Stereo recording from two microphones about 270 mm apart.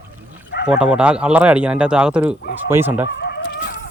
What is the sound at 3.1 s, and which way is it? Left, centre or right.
Chicken, left.